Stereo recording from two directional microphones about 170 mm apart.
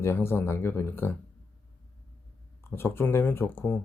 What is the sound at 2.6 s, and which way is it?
Speech, 15° left (ahead or behind).